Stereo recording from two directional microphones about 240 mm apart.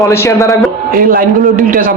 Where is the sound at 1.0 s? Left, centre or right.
Right.